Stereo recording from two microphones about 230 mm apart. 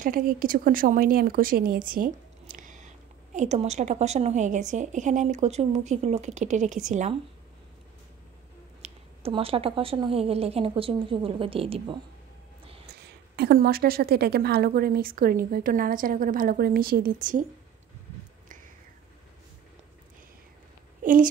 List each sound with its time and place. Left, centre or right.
0.0 s a woman's voice: right
8.8 s a woman's voice: right
12.8 s a woman's voice: right
21.0 s a sound: right